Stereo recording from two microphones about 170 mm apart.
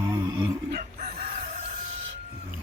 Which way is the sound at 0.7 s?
60° right (ahead or behind).